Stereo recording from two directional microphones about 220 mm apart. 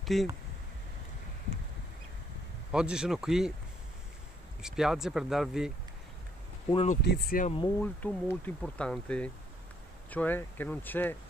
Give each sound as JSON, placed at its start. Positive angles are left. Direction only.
{"t": 0.0, "sound": "speech", "side_deg": 0}
{"t": 2.7, "sound": "speech", "side_deg": -5}
{"t": 4.6, "sound": "speech", "side_deg": -5}
{"t": 6.7, "sound": "speech", "side_deg": 25}
{"t": 7.1, "sound": "speech", "side_deg": 40}
{"t": 7.8, "sound": "speech", "side_deg": 10}